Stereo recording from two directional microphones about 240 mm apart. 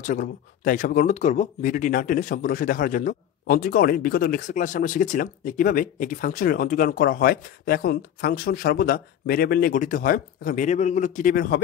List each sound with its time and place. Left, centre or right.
0.0 s speech: left